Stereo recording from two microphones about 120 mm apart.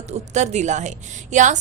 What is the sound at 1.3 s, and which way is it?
Speech, 90° right.